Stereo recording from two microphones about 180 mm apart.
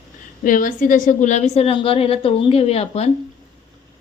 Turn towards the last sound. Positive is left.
turn(degrees=35)  # may be behind; listen again after turning